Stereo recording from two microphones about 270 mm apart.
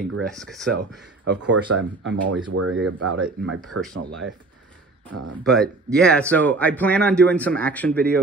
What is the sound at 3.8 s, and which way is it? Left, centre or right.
Speech, right.